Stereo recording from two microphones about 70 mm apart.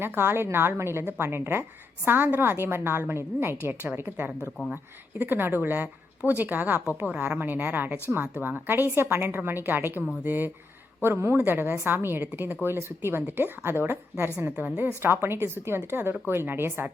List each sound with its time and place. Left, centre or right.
0.0 s a woman's voice: right